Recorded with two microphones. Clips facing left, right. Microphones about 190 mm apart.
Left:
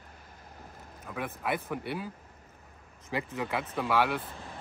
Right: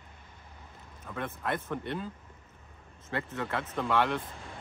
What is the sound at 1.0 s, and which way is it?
Speech, 10° left (ahead or behind).